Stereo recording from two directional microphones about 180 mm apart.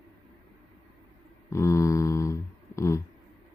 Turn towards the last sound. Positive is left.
turn(degrees=15)  # may be behind; listen again after turning